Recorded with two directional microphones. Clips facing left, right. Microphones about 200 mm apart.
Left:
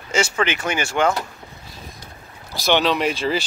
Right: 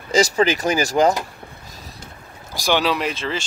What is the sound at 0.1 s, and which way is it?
Speech, 35° right (ahead or behind).